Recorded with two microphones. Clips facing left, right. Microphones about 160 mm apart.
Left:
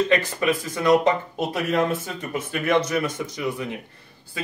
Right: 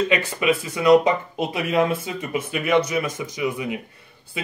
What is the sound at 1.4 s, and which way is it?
Speech, 5° right (ahead or behind).